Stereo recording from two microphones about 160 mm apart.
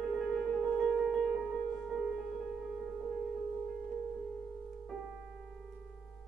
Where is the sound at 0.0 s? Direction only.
Centre (ahead or behind).